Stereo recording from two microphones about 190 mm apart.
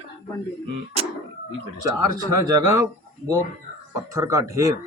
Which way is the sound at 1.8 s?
20° right (ahead or behind).